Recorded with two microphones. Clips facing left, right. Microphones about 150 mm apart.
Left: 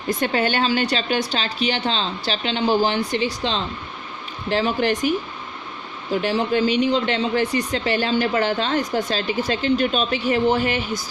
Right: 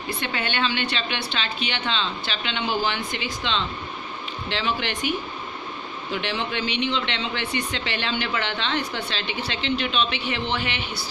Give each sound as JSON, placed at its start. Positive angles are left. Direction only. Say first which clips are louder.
{"t": 0.1, "sound": "speech", "louder": "left 8 dB", "side_deg": 40}